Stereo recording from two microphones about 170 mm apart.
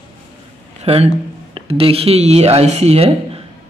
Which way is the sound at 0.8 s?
35° right (ahead or behind).